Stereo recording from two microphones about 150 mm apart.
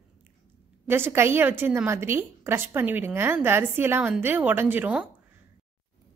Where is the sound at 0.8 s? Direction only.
15° right (ahead or behind).